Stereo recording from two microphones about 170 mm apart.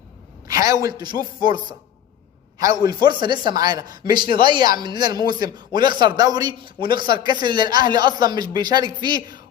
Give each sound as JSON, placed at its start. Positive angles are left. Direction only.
{"t": 0.4, "sound": "a woman's voice", "side_deg": -20}
{"t": 1.1, "sound": "speech", "side_deg": 55}
{"t": 2.6, "sound": "a man's voice", "side_deg": -20}